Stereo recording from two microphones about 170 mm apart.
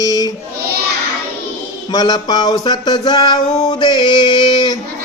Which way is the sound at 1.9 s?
25° left (ahead or behind).